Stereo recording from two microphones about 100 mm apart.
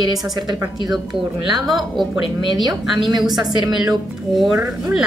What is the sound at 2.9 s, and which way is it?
Speech, centre (ahead or behind).